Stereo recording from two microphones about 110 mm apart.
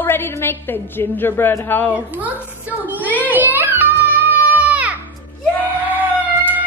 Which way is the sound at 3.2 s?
15° right (ahead or behind).